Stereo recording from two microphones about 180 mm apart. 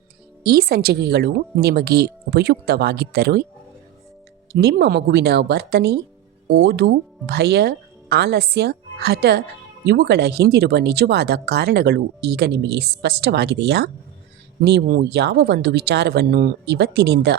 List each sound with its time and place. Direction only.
0.4 s speech: 60° right (ahead or behind)
4.5 s speech: 65° right (ahead or behind)